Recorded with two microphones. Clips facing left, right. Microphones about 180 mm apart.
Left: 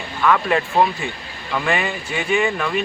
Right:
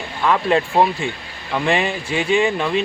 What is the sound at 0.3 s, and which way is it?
Speech, 25° right (ahead or behind).